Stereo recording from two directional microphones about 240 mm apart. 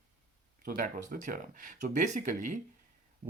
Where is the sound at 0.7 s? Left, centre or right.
Right.